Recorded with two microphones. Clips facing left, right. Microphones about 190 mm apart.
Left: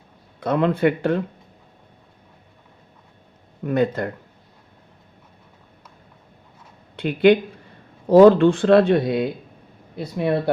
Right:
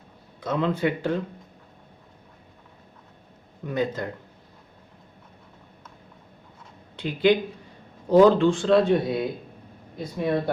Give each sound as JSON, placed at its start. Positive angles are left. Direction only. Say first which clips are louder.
{"t": 0.3, "sound": "speech", "louder": "left 5 dB", "side_deg": 60}
{"t": 3.7, "sound": "speech", "louder": "left 6 dB", "side_deg": 60}
{"t": 6.9, "sound": "speech", "louder": "left 5 dB", "side_deg": 60}